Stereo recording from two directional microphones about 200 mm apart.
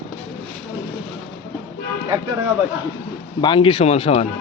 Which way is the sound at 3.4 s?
25° left (ahead or behind).